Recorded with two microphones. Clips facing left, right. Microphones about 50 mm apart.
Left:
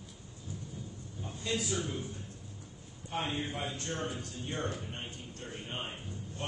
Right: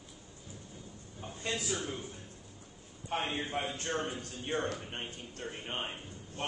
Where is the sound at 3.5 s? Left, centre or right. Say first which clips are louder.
Right 3 dB; right.